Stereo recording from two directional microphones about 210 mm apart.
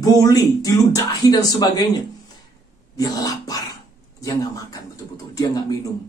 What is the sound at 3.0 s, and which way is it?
Speech, 15° left (ahead or behind).